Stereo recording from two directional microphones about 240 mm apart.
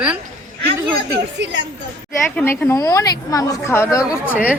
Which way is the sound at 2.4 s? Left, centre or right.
Centre.